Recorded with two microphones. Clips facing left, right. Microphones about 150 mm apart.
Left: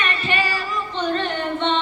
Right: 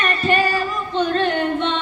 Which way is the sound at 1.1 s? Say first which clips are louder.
Right 4 dB; 55° right (ahead or behind).